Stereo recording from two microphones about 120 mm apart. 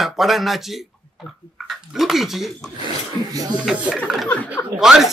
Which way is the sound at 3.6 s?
5° right (ahead or behind).